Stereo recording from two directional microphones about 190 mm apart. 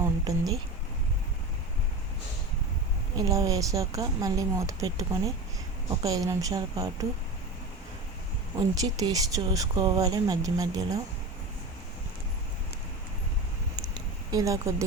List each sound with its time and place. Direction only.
0.0 s a sound: 20° right (ahead or behind)
3.2 s speech: 20° right (ahead or behind)
8.5 s speech: 20° right (ahead or behind)
14.3 s speech: 15° right (ahead or behind)